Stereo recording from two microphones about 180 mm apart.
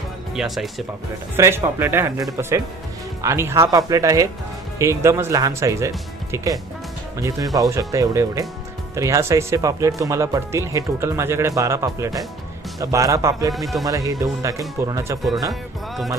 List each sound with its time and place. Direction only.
0.3 s speech: centre (ahead or behind)
1.4 s speech: 15° right (ahead or behind)
13.5 s speech: centre (ahead or behind)
13.8 s speech: 20° right (ahead or behind)